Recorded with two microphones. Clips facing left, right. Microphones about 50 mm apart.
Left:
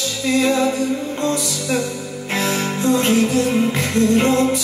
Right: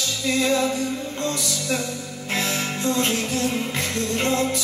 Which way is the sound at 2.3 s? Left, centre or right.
Left.